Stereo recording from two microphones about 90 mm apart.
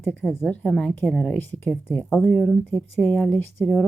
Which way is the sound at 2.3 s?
5° left (ahead or behind).